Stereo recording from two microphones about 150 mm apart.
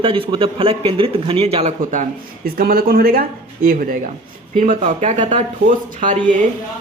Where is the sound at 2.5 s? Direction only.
80° right.